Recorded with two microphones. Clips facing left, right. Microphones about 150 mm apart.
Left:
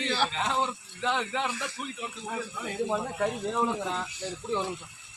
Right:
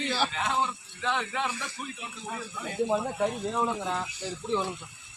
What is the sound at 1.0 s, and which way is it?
Speech, 20° left (ahead or behind).